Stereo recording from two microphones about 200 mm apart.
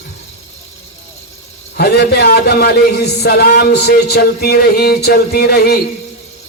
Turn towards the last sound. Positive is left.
turn(degrees=50)  # may be behind; listen again after turning